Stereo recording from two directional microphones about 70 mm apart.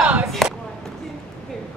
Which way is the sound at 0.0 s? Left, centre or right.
Centre.